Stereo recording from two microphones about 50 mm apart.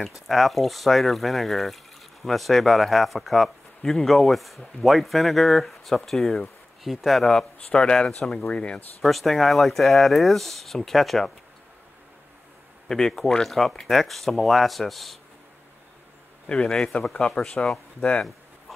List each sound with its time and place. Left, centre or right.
0.0 s speech: centre
7.5 s speech: centre
9.0 s speech: centre
12.8 s speech: centre
16.5 s speech: left